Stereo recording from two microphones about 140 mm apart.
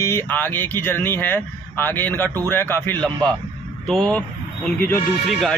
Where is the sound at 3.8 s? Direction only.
5° left (ahead or behind).